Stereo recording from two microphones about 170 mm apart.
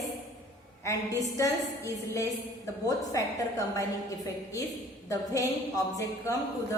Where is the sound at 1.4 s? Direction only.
20° left (ahead or behind).